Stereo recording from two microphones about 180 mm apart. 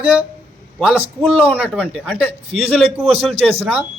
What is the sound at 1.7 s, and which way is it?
Speech, 5° left (ahead or behind).